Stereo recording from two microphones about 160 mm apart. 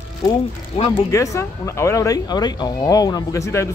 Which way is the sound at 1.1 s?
20° left (ahead or behind).